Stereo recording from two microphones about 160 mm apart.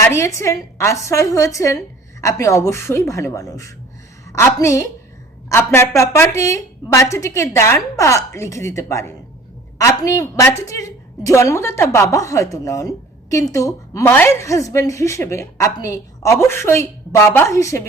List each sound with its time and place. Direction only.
0.0 s a woman's voice: 15° left (ahead or behind)